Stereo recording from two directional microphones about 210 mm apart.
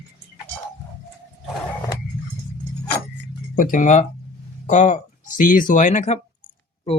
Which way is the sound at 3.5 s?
40° left (ahead or behind).